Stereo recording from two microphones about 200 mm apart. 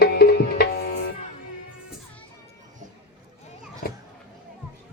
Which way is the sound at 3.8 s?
45° left (ahead or behind).